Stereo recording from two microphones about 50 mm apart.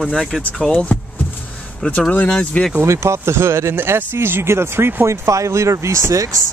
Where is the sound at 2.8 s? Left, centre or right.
Right.